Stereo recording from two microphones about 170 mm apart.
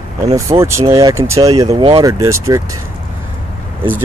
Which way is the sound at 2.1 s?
20° right (ahead or behind).